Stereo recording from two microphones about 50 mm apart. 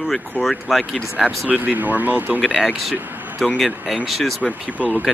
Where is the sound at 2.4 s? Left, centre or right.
Centre.